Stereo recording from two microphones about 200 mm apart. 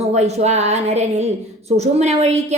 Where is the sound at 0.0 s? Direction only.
35° right (ahead or behind).